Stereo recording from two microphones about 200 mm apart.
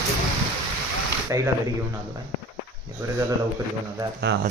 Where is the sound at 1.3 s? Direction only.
15° right (ahead or behind).